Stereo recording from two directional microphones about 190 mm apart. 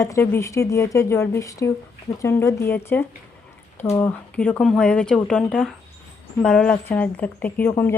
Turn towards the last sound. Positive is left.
turn(degrees=10)  # may be behind; listen again after turning